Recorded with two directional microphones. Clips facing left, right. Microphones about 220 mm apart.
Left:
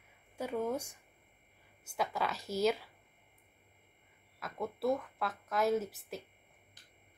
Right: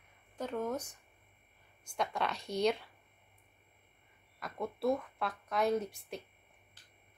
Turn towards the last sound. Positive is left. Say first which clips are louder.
# left 1 dB
turn(degrees=5)  # may be behind; listen again after turning